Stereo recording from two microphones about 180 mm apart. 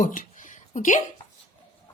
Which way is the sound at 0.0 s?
45° left (ahead or behind).